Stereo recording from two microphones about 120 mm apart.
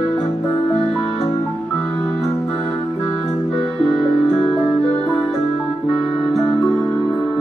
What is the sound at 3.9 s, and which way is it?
Music, centre (ahead or behind).